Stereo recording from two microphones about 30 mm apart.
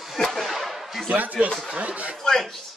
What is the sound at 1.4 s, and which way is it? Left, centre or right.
Speech, right.